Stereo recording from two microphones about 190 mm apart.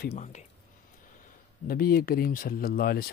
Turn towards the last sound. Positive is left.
turn(degrees=50)  # may be behind; listen again after turning